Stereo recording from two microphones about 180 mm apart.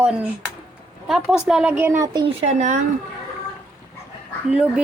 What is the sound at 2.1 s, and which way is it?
Speech, 35° right (ahead or behind).